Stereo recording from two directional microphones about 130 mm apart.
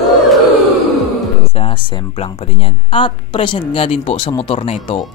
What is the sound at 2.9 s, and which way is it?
Speech, 40° left (ahead or behind).